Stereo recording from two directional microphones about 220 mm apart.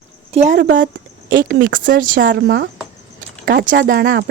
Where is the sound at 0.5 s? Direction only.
55° right (ahead or behind).